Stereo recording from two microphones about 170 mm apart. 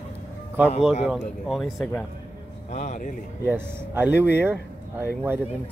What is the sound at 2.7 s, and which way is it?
Speech, 45° left (ahead or behind).